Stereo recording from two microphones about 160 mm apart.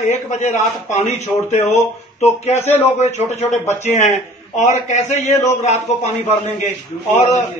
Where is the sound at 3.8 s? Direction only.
45° left (ahead or behind).